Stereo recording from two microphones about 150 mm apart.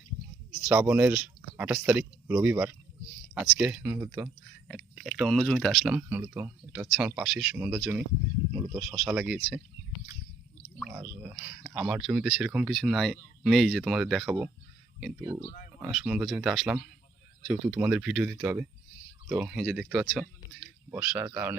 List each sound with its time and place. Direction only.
0.6 s speech: 10° right (ahead or behind)
4.7 s speech: 5° right (ahead or behind)
10.9 s speech: 10° right (ahead or behind)
15.2 s speech: 60° left (ahead or behind)
15.8 s speech: 5° right (ahead or behind)